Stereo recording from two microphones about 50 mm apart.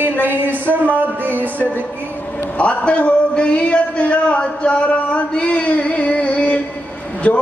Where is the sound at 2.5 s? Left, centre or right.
Left.